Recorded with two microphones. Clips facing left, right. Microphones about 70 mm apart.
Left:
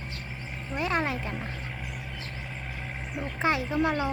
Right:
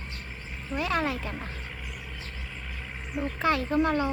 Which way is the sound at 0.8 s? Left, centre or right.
Left.